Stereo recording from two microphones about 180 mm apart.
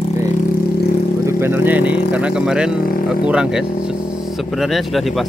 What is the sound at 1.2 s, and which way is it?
Speech, 10° right (ahead or behind).